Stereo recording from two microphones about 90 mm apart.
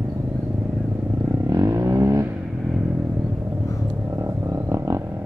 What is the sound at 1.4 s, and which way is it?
Vehicle, 40° right (ahead or behind).